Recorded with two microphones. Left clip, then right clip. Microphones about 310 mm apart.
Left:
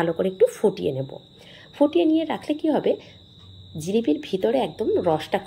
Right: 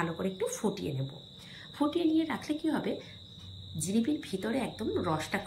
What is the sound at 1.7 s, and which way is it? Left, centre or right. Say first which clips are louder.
A woman's voice: left 10 dB; left.